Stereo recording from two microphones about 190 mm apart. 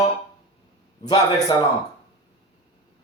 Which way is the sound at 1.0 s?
20° left (ahead or behind).